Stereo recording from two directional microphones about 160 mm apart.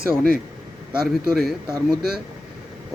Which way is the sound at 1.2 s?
Centre (ahead or behind).